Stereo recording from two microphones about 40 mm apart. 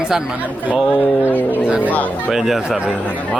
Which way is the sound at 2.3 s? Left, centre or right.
Centre.